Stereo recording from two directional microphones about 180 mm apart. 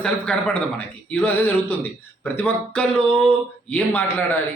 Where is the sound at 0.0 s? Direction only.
5° left (ahead or behind).